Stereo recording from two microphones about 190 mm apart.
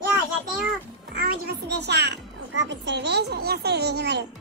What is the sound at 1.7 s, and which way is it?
A child's voice, 60° right (ahead or behind).